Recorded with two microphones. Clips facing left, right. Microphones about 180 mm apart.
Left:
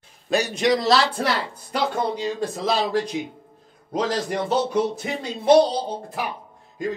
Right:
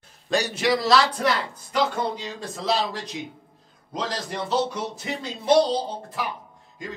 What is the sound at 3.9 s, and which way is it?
Speech, 55° left (ahead or behind).